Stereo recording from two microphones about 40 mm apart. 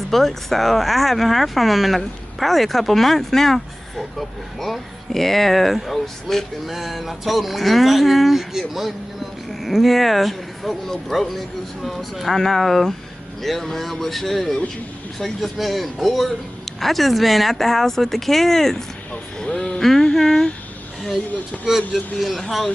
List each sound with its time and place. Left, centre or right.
0.1 s speech: centre
6.7 s speech: centre
19.4 s speech: left
19.8 s a sound: centre
21.6 s speech: centre